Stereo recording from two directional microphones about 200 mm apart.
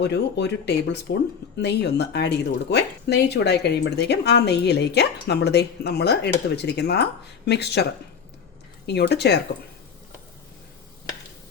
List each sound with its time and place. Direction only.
0.0 s speech: 60° left (ahead or behind)
8.9 s speech: 55° left (ahead or behind)